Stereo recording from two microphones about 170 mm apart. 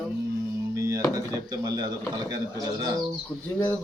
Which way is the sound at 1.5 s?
25° right (ahead or behind).